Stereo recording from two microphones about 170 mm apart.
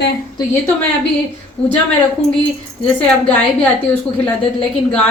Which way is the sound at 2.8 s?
5° left (ahead or behind).